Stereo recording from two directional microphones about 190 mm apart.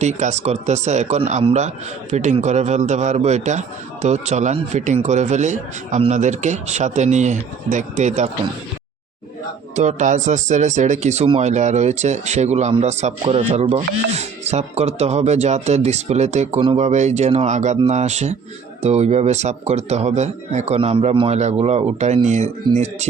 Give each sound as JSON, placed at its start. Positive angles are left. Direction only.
{"t": 0.0, "sound": "a man's voice", "side_deg": -40}
{"t": 9.7, "sound": "a man's voice", "side_deg": -40}